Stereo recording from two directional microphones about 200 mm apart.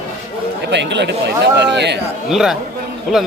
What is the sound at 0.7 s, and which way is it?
Speech, 60° right (ahead or behind).